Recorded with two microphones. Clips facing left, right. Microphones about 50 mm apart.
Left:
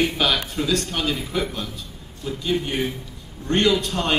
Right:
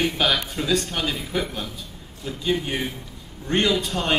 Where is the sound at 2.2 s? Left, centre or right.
Centre.